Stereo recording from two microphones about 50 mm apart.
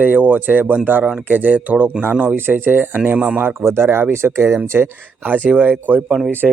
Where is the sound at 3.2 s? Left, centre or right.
Right.